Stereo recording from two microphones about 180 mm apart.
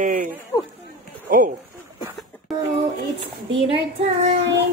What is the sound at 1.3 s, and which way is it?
Speech, 50° right (ahead or behind).